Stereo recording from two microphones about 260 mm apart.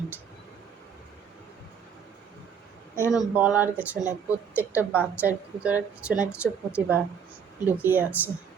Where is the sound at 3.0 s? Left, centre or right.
Centre.